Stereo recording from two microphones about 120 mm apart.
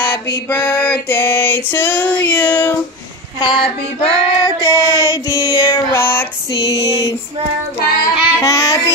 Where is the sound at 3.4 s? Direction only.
40° left (ahead or behind).